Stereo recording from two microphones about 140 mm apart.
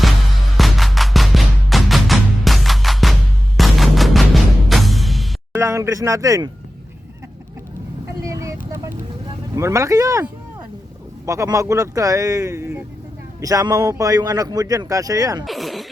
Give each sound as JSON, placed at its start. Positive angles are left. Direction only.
{"t": 0.5, "sound": "music", "side_deg": 0}
{"t": 3.6, "sound": "fusillade", "side_deg": 0}
{"t": 4.7, "sound": "music", "side_deg": 0}
{"t": 5.5, "sound": "speech", "side_deg": -20}
{"t": 8.2, "sound": "vehicle", "side_deg": -25}
{"t": 9.6, "sound": "speech", "side_deg": -20}
{"t": 11.3, "sound": "speech", "side_deg": -25}
{"t": 15.4, "sound": "a sound", "side_deg": 0}